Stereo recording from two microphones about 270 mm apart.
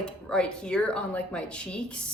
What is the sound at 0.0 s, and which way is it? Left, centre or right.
A woman's voice, centre.